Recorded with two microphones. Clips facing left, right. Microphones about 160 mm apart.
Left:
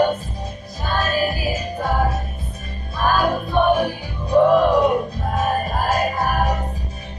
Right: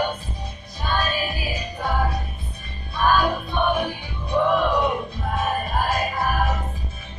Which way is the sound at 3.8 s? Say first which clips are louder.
Left 5 dB; 40° left (ahead or behind).